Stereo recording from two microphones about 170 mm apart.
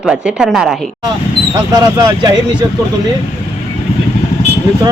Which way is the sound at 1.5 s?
20° right (ahead or behind).